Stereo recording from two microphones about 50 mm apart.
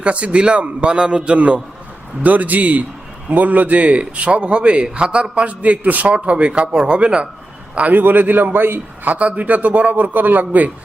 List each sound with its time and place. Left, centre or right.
0.0 s a man's voice: right
0.9 s a man's voice: centre
1.2 s a man's voice: right
7.8 s a man's voice: right
9.1 s a man's voice: right